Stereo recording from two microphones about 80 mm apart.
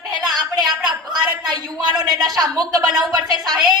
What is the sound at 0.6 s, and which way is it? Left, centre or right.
A woman's voice, right.